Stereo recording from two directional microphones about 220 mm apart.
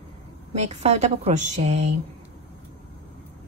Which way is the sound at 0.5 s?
30° right (ahead or behind).